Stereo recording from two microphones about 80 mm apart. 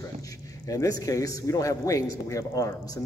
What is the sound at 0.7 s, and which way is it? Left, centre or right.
Speech, left.